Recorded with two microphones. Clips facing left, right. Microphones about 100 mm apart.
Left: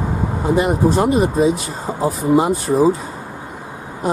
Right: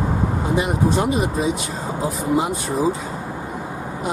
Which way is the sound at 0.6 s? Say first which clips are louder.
Left 5 dB; centre (ahead or behind).